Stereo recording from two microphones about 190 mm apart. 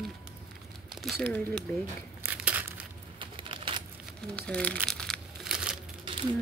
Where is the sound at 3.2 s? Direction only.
25° right (ahead or behind).